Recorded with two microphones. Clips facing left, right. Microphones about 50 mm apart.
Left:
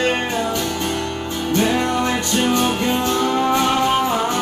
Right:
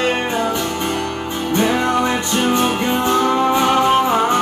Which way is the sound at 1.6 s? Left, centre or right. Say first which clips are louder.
Right 2 dB; right.